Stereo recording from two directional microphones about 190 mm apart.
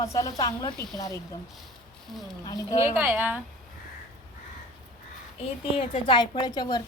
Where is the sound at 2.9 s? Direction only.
10° right (ahead or behind).